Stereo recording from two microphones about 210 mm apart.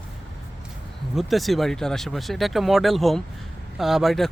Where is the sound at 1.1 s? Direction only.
Centre (ahead or behind).